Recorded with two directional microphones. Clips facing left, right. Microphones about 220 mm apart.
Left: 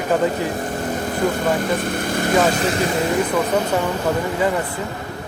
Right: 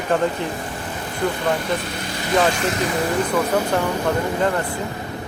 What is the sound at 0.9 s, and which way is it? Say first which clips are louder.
Speech: left 3 dB; 45° left (ahead or behind).